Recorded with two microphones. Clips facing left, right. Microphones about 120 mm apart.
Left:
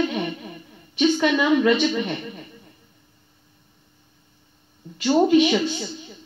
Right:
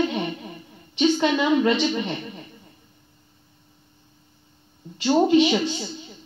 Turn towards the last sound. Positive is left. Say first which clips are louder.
# left 1 dB
turn(degrees=-30)  # may be behind; listen again after turning